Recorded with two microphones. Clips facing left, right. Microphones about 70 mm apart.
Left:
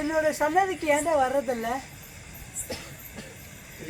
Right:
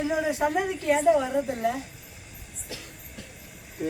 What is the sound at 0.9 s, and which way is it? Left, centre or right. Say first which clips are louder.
Speech: right 1 dB; left.